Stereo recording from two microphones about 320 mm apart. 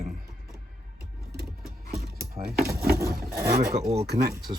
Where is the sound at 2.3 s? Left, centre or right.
Right.